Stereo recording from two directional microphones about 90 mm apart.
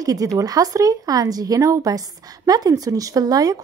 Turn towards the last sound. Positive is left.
turn(degrees=-45)  # may be behind; listen again after turning